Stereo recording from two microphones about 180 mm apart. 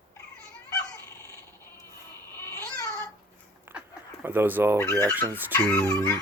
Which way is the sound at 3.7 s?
10° right (ahead or behind).